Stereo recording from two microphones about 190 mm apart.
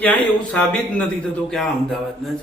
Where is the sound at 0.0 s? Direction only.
5° left (ahead or behind).